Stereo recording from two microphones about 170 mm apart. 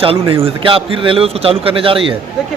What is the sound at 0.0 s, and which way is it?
A man's voice, 30° right (ahead or behind).